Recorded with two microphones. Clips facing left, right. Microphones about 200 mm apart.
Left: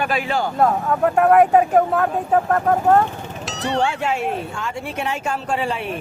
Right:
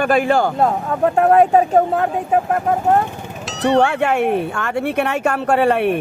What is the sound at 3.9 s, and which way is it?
Speech, 60° right (ahead or behind).